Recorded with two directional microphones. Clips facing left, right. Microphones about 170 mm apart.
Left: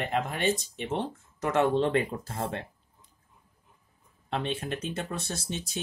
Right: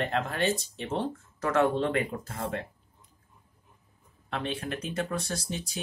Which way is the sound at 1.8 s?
30° left (ahead or behind).